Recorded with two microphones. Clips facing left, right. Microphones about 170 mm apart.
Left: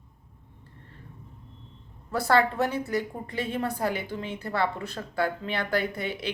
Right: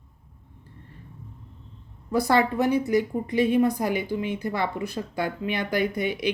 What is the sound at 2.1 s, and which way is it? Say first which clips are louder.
A woman's voice: right 2 dB; 15° right (ahead or behind).